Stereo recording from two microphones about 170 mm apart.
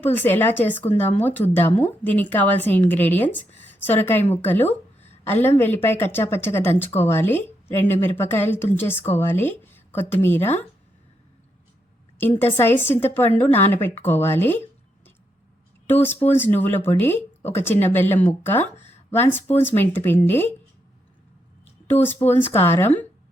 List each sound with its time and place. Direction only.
0.0 s speech: 10° left (ahead or behind)
12.4 s speech: 15° left (ahead or behind)
21.9 s speech: 40° left (ahead or behind)
22.3 s speech: 15° left (ahead or behind)